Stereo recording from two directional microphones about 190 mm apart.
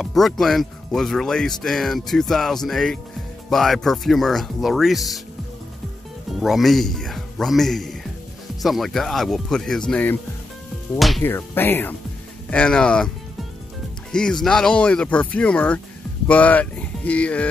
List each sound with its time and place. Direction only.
0.0 s speech: centre (ahead or behind)
6.4 s speech: centre (ahead or behind)
11.2 s speech: 10° left (ahead or behind)
14.1 s speech: 5° left (ahead or behind)